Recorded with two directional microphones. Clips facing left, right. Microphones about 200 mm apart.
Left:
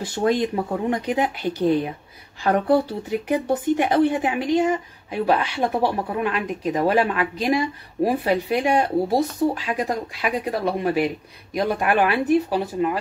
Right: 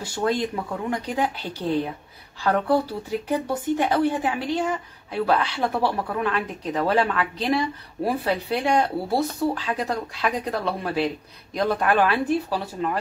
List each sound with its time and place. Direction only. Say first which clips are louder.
0.1 s speech: left 3 dB; 15° left (ahead or behind)